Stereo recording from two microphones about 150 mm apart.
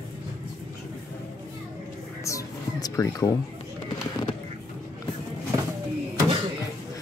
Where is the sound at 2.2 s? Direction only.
20° left (ahead or behind).